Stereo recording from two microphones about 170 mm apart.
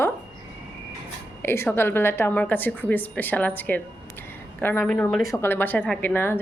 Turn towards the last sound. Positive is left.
turn(degrees=15)  # may be behind; listen again after turning